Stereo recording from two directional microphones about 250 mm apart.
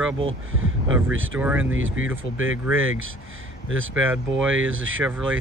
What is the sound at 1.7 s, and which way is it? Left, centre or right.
Speech, right.